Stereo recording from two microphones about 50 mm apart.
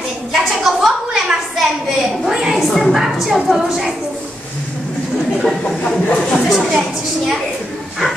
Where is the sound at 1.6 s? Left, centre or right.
Centre.